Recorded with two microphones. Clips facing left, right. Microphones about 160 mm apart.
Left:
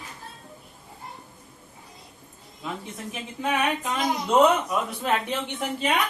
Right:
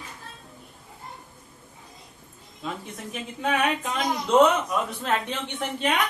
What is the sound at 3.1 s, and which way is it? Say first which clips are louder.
Speech: right 1 dB; 5° left (ahead or behind).